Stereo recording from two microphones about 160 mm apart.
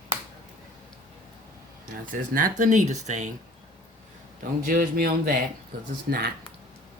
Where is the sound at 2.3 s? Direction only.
55° right (ahead or behind).